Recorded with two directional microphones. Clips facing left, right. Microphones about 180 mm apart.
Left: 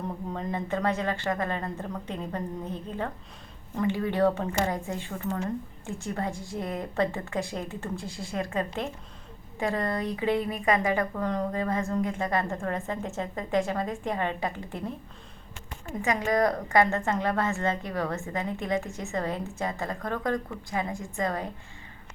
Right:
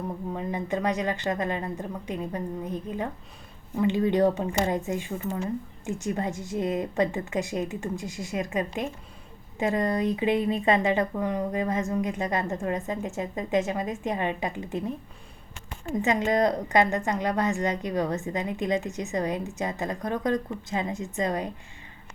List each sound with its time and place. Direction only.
0.3 s a woman's voice: 15° right (ahead or behind)
11.2 s a woman's voice: 10° right (ahead or behind)
16.0 s a woman's voice: 25° right (ahead or behind)